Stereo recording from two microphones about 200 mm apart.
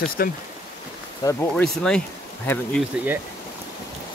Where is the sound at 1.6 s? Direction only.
5° left (ahead or behind).